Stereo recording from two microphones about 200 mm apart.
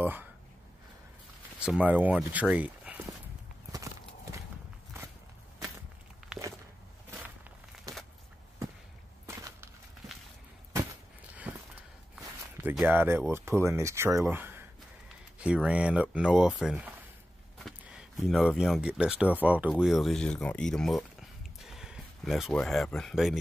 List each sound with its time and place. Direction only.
0.0 s speech: 10° right (ahead or behind)
1.6 s speech: 5° right (ahead or behind)
6.2 s walk: centre (ahead or behind)
9.2 s a sound: 15° right (ahead or behind)
11.5 s a sound: 10° right (ahead or behind)
12.6 s speech: 10° right (ahead or behind)